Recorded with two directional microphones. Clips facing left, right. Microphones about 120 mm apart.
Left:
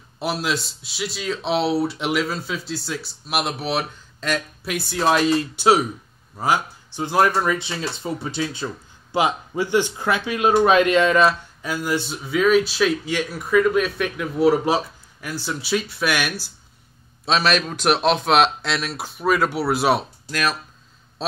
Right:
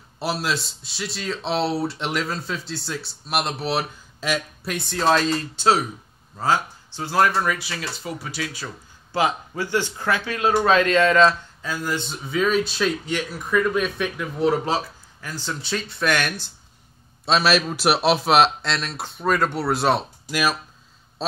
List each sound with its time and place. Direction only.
0.2 s speech: centre (ahead or behind)
4.7 s speech: 10° left (ahead or behind)
14.6 s speech: 15° left (ahead or behind)
20.2 s speech: 10° right (ahead or behind)
21.2 s a sound: centre (ahead or behind)